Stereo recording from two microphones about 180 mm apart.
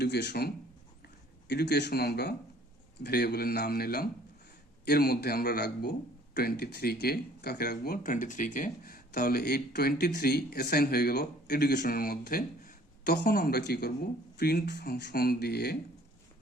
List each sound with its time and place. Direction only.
0.0 s speech: 65° left (ahead or behind)